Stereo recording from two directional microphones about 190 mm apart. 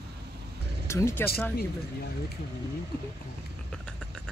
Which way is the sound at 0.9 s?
15° left (ahead or behind).